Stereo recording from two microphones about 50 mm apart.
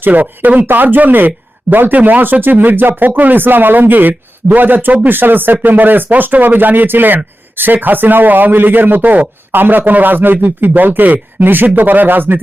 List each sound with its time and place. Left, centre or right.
0.0 s speech: right